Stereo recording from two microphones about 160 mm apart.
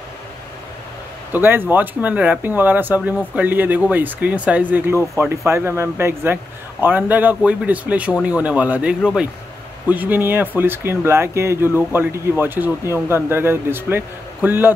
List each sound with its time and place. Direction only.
1.3 s a man's voice: 15° right (ahead or behind)